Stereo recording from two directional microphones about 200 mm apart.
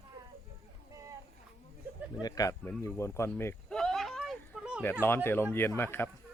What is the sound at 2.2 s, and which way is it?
Speech, 20° left (ahead or behind).